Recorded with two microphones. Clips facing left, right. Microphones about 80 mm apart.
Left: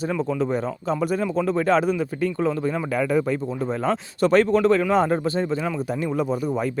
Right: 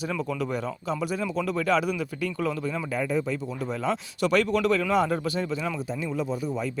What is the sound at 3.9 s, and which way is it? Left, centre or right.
Speech, left.